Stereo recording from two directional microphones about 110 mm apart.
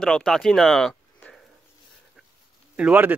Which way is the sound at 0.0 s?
5° left (ahead or behind).